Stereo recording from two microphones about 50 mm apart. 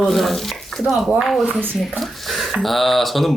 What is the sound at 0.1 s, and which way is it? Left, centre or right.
Speech, centre.